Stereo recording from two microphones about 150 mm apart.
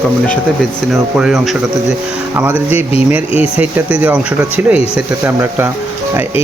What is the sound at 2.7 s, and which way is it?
Speech, 40° left (ahead or behind).